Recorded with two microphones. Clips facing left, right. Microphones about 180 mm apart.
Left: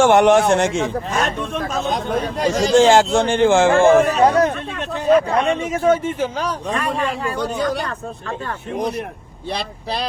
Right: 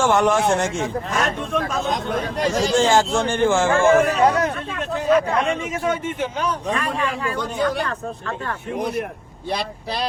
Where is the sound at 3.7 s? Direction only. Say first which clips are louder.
Left 3 dB; 35° left (ahead or behind).